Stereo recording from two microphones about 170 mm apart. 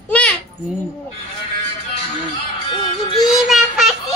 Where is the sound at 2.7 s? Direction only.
30° left (ahead or behind).